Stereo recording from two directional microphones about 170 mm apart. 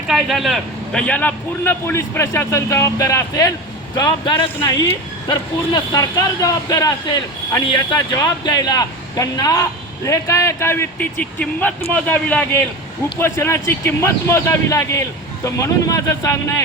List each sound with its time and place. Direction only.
0.1 s a man's voice: centre (ahead or behind); by 16.6 s 20° left (ahead or behind)